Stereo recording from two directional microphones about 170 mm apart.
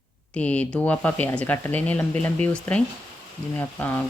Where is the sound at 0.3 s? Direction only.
10° left (ahead or behind).